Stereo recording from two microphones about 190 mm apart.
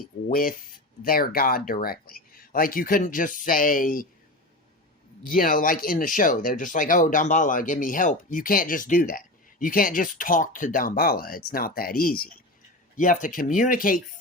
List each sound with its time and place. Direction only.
0.0 s speech: 50° left (ahead or behind)
5.2 s speech: 45° left (ahead or behind)